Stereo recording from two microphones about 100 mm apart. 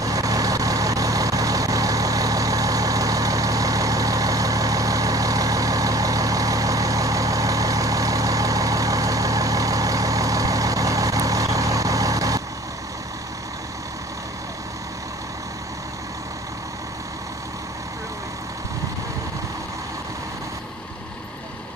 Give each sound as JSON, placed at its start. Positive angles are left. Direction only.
{"t": 0.0, "sound": "vehicle", "side_deg": -35}